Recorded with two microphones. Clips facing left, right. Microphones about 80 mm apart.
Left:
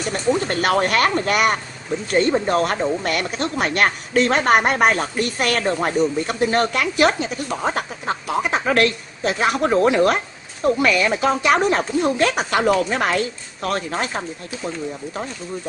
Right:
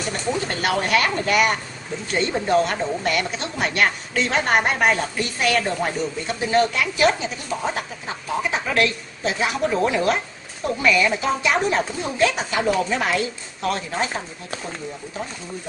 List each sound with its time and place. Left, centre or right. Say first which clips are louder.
0.6 s a woman's voice: left 2 dB; left